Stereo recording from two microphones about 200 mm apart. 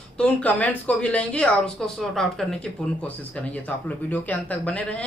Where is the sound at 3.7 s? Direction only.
10° left (ahead or behind).